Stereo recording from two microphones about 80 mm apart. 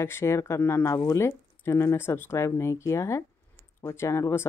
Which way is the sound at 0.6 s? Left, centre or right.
Left.